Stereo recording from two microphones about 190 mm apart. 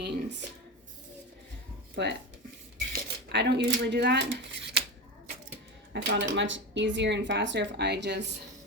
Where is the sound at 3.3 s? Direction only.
65° right (ahead or behind).